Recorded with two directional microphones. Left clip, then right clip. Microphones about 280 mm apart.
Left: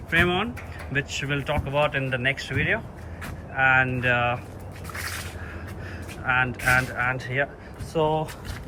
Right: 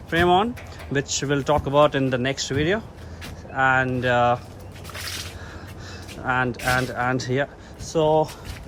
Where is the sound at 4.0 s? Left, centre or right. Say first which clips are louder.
Right 4 dB; centre.